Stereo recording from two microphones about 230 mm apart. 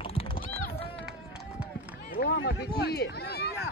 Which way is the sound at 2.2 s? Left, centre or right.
Left.